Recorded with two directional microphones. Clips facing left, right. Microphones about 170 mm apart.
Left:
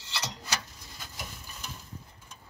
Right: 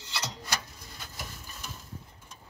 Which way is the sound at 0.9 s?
Centre (ahead or behind).